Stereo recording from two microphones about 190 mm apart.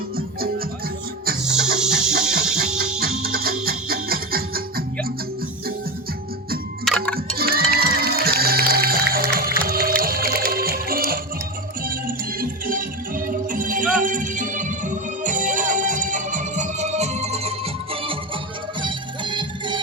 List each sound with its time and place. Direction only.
0.2 s music: 50° right (ahead or behind)
1.4 s music: 5° right (ahead or behind)
3.2 s music: 50° right (ahead or behind)
6.8 s tick-tock: 5° left (ahead or behind)
7.3 s music: 50° right (ahead or behind); by 17.5 s 35° right (ahead or behind)
18.8 s music: 25° right (ahead or behind)